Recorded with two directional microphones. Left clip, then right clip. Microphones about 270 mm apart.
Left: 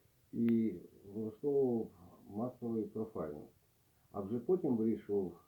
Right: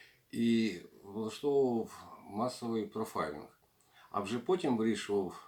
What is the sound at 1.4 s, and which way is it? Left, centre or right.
Speech, right.